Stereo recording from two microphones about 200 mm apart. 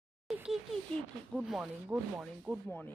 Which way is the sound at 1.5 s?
5° right (ahead or behind).